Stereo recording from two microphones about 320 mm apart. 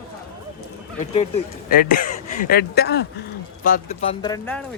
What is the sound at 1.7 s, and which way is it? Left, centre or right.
Speech, left.